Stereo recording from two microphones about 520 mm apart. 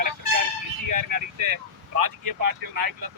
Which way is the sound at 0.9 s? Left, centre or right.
Right.